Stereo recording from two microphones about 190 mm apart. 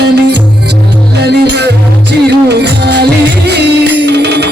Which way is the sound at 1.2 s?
65° right (ahead or behind).